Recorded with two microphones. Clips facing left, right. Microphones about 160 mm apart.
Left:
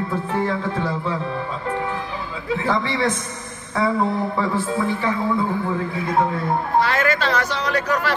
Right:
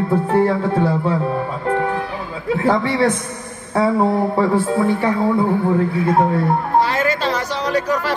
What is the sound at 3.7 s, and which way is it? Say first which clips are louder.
Speech: right 5 dB; 35° right (ahead or behind).